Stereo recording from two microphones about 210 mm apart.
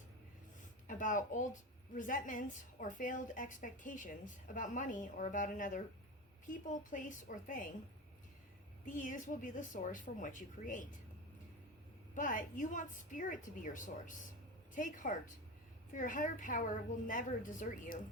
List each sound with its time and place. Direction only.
0.9 s a woman's voice: 40° left (ahead or behind)
8.9 s a woman's voice: 40° left (ahead or behind)
12.1 s a woman's voice: 40° left (ahead or behind)